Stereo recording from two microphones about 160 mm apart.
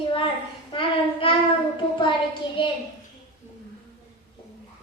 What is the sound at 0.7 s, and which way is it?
Child singing, 35° left (ahead or behind).